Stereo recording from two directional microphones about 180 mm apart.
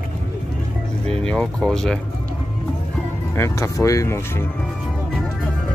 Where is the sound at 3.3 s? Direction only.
15° left (ahead or behind).